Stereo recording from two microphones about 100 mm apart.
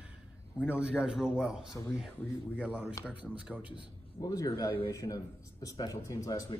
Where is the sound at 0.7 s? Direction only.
10° right (ahead or behind).